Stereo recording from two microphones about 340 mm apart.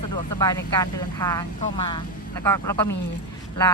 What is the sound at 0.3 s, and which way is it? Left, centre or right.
Speech, centre.